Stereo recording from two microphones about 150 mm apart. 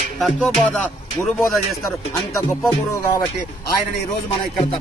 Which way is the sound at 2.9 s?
20° left (ahead or behind).